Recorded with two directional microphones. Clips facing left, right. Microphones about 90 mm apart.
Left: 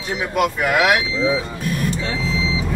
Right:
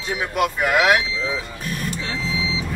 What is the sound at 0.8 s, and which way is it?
Speech, 10° left (ahead or behind).